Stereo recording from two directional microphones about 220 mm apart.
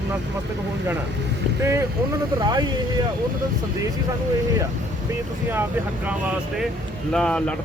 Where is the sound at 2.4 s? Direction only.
20° right (ahead or behind).